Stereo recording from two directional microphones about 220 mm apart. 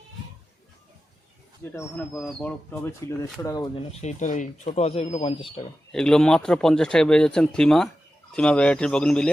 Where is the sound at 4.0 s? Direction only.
35° left (ahead or behind).